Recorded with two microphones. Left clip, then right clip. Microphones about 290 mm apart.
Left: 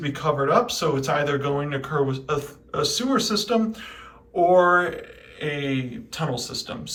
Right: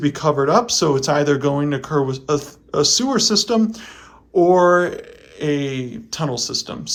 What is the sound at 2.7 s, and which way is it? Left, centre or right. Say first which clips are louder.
Speech: right 6 dB; right.